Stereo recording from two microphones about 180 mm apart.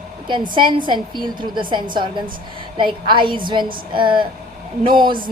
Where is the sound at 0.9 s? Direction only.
25° right (ahead or behind).